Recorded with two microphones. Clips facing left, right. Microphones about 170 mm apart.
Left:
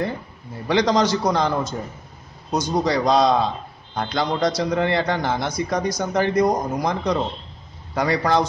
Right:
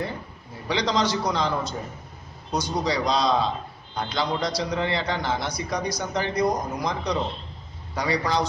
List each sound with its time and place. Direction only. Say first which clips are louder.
0.7 s a man's voice: left 6 dB; 50° left (ahead or behind)